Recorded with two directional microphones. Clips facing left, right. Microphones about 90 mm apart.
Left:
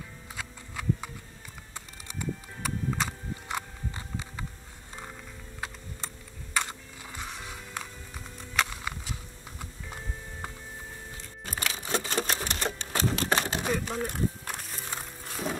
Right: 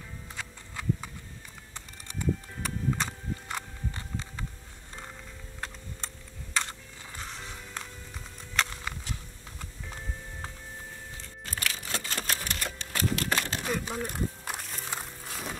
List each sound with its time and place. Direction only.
0.4 s a sound: 5° left (ahead or behind)
1.7 s horse: 5° left (ahead or behind)
6.5 s music: 10° left (ahead or behind)
11.4 s typewriter: 20° left (ahead or behind)
13.7 s music: 5° left (ahead or behind)